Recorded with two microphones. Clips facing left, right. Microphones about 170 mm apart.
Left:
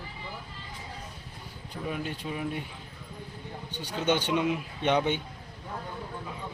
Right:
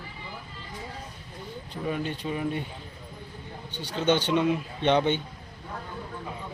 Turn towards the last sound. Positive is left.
turn(degrees=5)  # may be behind; listen again after turning